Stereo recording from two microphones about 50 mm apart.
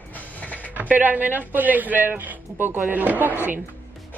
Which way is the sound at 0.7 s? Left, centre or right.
Right.